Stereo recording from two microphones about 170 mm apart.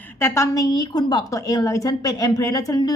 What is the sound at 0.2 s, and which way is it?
Speech, 15° left (ahead or behind).